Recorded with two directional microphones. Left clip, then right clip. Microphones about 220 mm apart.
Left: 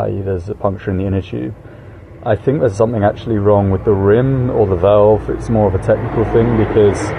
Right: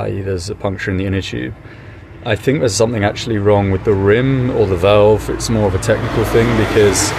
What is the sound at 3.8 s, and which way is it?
Speech, 25° right (ahead or behind).